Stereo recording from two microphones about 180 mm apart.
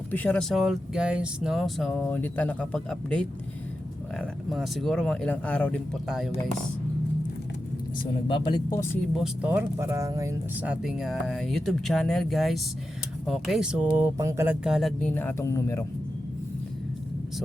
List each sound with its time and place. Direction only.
0.1 s speech: 10° left (ahead or behind)
8.0 s speech: 25° left (ahead or behind)
9.1 s speech: 5° right (ahead or behind)
10.6 s speech: 5° right (ahead or behind)
14.6 s speech: centre (ahead or behind)
15.1 s speech: 10° left (ahead or behind)